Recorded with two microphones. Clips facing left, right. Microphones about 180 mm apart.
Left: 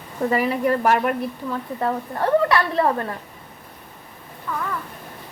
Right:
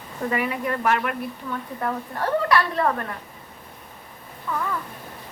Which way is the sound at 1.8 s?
25° left (ahead or behind).